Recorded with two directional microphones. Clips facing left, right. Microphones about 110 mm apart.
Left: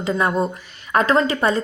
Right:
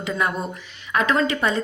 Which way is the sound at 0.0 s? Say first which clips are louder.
Left 5 dB; 30° left (ahead or behind).